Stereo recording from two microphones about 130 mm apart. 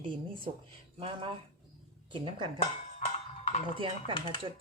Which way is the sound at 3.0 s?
60° left (ahead or behind).